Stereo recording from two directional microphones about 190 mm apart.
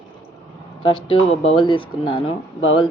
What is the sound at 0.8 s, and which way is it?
A woman's voice, 25° left (ahead or behind).